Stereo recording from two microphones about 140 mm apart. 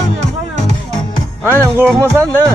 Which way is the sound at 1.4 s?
15° right (ahead or behind).